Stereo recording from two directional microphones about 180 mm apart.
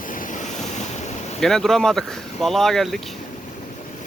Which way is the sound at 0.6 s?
40° left (ahead or behind).